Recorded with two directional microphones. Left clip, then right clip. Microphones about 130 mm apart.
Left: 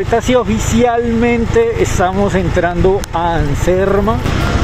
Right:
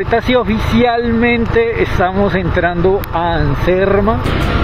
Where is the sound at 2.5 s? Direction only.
20° right (ahead or behind).